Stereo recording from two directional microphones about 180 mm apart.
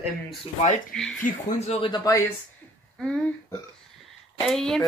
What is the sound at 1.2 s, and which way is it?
Speech, 35° left (ahead or behind).